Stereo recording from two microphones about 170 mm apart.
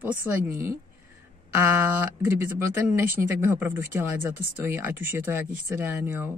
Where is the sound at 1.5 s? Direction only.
15° right (ahead or behind).